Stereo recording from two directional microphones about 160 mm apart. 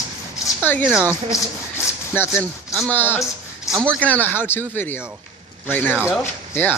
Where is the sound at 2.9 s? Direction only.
15° left (ahead or behind).